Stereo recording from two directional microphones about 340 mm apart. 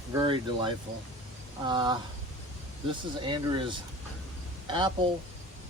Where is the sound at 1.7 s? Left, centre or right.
Centre.